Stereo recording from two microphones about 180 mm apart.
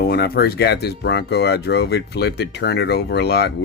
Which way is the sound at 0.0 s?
60° left (ahead or behind).